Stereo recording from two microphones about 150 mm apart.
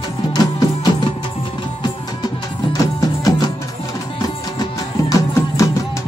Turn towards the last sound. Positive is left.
turn(degrees=20)  # may be behind; listen again after turning